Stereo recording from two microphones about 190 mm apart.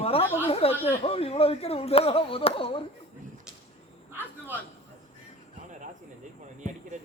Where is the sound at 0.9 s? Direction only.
30° left (ahead or behind).